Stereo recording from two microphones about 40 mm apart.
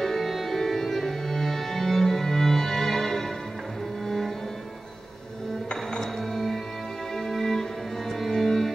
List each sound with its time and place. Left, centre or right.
0.0 s music: centre
5.7 s music: centre